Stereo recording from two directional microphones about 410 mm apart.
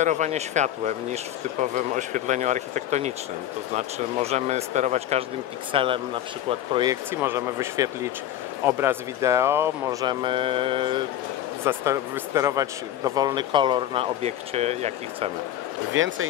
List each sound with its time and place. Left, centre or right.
0.0 s speech: centre
15.9 s speech: right